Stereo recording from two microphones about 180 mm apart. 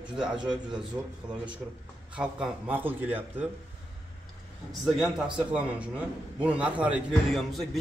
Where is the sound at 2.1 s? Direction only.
5° right (ahead or behind).